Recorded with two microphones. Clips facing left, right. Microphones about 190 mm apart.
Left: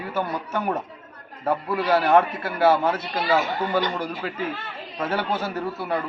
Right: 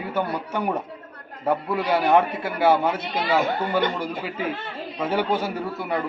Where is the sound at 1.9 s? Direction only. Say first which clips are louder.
Left 1 dB; 15° right (ahead or behind).